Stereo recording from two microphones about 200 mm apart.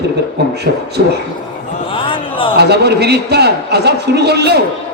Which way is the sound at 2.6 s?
55° right (ahead or behind).